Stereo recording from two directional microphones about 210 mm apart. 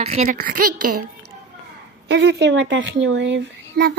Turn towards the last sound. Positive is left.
turn(degrees=-60)  # may be behind; listen again after turning